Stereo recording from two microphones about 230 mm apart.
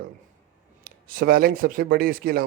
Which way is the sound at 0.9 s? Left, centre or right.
Right.